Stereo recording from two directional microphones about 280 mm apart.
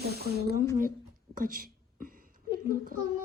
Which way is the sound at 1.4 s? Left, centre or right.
Right.